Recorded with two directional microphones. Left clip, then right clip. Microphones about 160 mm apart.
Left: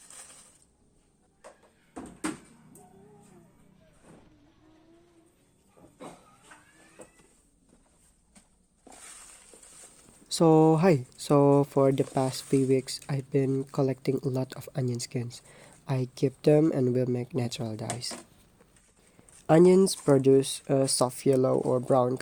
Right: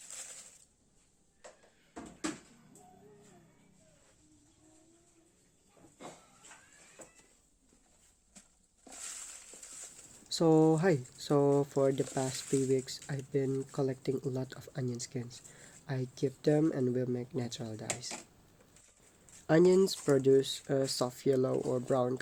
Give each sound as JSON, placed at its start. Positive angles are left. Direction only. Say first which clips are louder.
{"t": 10.2, "sound": "speech", "louder": "left 6 dB", "side_deg": 55}
{"t": 19.5, "sound": "speech", "louder": "left 6 dB", "side_deg": 45}